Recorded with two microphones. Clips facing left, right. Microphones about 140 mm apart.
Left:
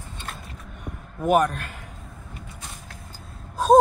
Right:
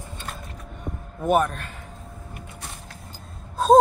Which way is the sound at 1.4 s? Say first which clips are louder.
Left 3 dB; 5° left (ahead or behind).